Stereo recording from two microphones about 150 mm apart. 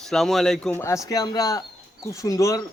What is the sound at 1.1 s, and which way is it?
Stir, 25° left (ahead or behind).